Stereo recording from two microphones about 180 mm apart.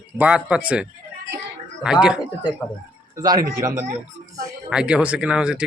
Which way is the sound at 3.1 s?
20° right (ahead or behind).